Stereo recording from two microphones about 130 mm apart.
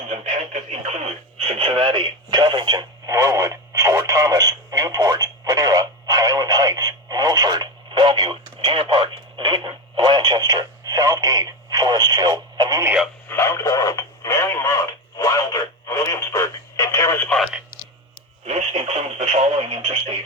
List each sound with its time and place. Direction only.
1.5 s radio: 40° right (ahead or behind)
13.2 s radio: 20° left (ahead or behind)
17.2 s radio: 5° left (ahead or behind)
18.4 s radio: 55° right (ahead or behind)